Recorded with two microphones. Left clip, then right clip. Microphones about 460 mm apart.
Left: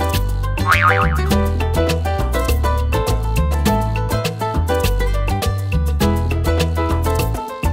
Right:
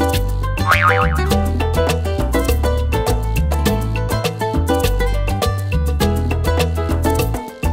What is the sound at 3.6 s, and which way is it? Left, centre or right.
Music, right.